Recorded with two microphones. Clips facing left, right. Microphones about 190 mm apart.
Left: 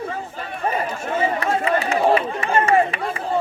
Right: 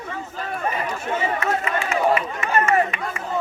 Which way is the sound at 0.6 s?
30° left (ahead or behind).